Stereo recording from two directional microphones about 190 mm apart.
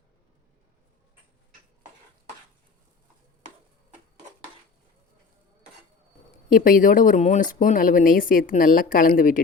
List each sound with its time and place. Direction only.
6.5 s speech: 45° left (ahead or behind)